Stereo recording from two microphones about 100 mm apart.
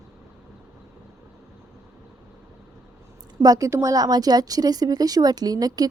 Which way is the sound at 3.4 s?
35° right (ahead or behind).